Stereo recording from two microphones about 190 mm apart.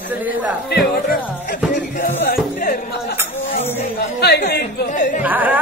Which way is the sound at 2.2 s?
50° left (ahead or behind).